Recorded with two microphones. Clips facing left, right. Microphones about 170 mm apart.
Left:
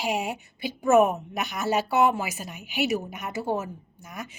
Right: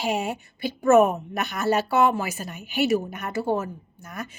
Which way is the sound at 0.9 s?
Centre (ahead or behind).